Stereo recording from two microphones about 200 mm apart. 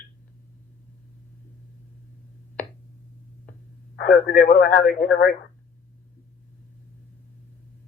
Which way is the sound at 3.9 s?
50° left (ahead or behind).